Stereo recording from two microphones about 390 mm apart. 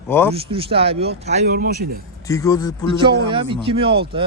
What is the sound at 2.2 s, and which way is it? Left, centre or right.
Speech, centre.